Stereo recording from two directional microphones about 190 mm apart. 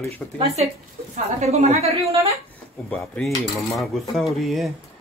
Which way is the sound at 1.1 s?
35° right (ahead or behind).